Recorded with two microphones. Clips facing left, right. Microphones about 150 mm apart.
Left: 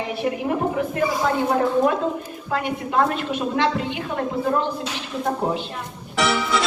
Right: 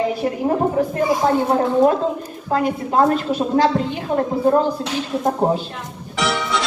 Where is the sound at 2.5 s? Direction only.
35° right (ahead or behind).